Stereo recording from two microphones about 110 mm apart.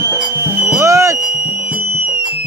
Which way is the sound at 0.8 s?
30° right (ahead or behind).